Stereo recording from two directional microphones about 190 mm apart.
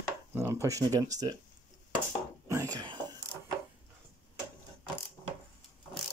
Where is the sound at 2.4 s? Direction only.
15° right (ahead or behind).